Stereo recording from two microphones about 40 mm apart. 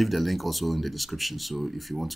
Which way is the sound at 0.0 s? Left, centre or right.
Centre.